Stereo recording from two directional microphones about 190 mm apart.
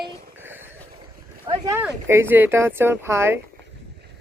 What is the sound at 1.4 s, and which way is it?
Speech, 20° right (ahead or behind).